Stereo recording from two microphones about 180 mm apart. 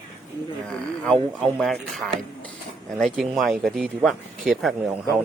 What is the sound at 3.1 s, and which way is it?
Speech, centre (ahead or behind).